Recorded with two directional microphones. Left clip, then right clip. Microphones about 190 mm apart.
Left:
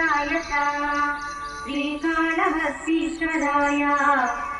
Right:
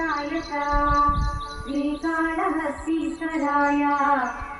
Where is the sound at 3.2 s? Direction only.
65° right (ahead or behind).